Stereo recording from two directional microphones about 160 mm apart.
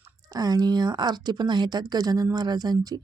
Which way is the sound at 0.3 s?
25° right (ahead or behind).